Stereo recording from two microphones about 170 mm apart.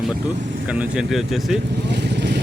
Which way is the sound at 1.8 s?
85° right.